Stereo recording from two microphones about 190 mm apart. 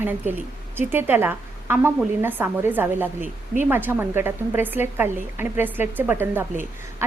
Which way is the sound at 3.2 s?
40° right (ahead or behind).